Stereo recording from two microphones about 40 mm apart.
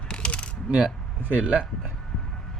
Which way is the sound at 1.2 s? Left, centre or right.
Right.